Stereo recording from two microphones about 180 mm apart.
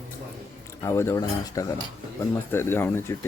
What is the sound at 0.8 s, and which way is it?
Speech, 15° left (ahead or behind).